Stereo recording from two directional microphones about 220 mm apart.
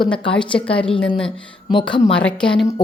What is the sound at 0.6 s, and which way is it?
A woman's voice, 5° left (ahead or behind).